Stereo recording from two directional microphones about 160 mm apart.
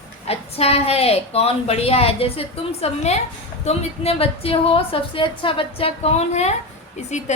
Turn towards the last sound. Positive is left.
turn(degrees=45)  # may be behind; listen again after turning